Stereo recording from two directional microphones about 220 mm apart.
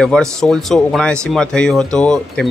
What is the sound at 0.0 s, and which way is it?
Speech, 5° left (ahead or behind).